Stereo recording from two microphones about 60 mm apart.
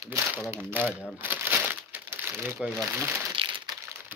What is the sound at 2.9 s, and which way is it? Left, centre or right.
Speech, right.